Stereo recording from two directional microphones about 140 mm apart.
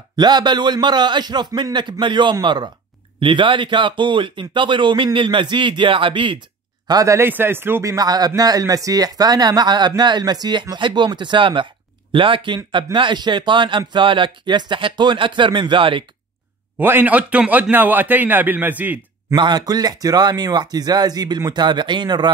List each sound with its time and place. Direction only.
0.1 s speech: 30° right (ahead or behind)
6.9 s speech: 25° right (ahead or behind)
16.7 s a man's voice: 15° right (ahead or behind)
19.3 s speech: 30° right (ahead or behind)